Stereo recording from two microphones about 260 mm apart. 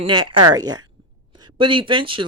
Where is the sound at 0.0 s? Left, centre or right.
Centre.